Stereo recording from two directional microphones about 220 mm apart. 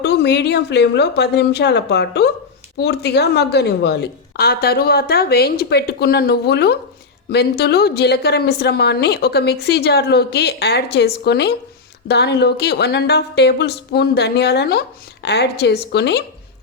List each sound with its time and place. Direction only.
0.0 s a woman's voice: 50° left (ahead or behind)